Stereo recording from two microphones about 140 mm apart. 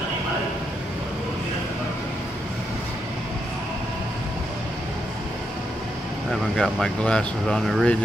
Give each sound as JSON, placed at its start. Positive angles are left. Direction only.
{"t": 6.5, "sound": "speech", "side_deg": 5}